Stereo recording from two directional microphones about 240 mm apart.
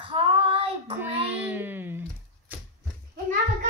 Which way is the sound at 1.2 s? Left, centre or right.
Centre.